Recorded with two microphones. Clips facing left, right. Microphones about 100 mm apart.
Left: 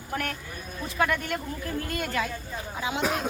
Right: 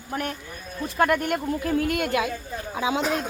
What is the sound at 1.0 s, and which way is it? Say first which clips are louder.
Speech: right 5 dB; 50° right (ahead or behind).